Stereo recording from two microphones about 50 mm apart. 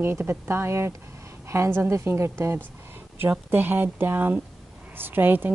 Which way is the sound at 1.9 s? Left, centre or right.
Right.